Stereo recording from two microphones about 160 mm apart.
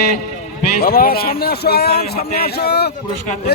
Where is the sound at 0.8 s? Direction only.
70° left (ahead or behind); by 2.9 s 90° left.